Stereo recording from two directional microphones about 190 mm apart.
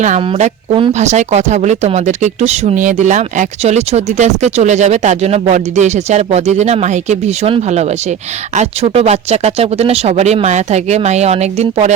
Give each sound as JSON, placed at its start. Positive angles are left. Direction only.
{"t": 0.0, "sound": "speech", "side_deg": -40}